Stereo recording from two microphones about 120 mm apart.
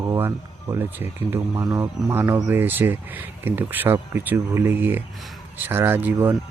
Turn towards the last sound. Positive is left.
turn(degrees=-15)  # may be behind; listen again after turning